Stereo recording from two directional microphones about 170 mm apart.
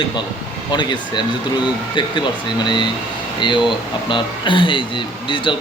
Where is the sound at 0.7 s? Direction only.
25° left (ahead or behind).